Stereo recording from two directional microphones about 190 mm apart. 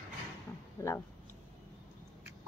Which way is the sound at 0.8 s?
15° left (ahead or behind).